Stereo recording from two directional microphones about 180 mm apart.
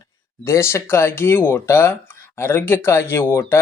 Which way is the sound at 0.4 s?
15° left (ahead or behind).